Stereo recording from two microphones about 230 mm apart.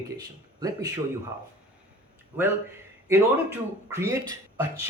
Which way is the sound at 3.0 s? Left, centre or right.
Centre.